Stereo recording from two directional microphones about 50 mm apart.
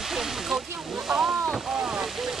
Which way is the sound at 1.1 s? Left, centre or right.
Right.